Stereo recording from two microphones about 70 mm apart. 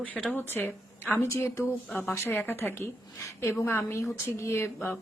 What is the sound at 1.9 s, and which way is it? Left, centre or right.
Speech, centre.